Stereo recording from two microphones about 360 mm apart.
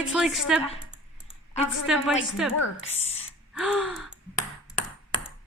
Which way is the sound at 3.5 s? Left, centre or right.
Centre.